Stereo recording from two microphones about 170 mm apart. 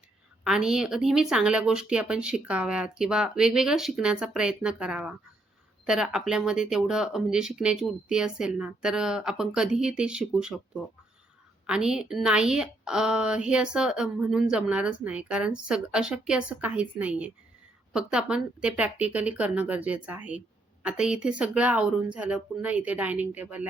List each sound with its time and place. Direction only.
0.4 s a woman's voice: 5° right (ahead or behind)
11.6 s a woman's voice: 5° right (ahead or behind)